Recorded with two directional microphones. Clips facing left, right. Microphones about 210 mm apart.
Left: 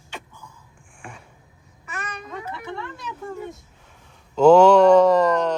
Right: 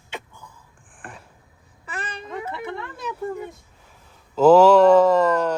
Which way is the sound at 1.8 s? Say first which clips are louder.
Right 1 dB; 30° right (ahead or behind).